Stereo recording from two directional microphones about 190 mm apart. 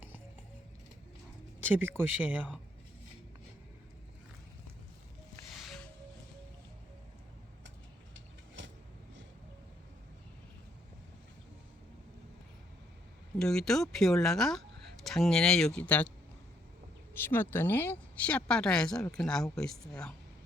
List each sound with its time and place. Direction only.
1.6 s speech: 10° right (ahead or behind)
5.5 s music: centre (ahead or behind)
8.1 s vehicle: 75° right (ahead or behind)
13.4 s speech: 5° left (ahead or behind)
17.2 s speech: 10° left (ahead or behind)